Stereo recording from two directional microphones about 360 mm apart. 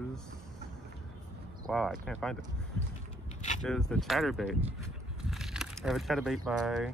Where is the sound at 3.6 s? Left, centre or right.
Centre.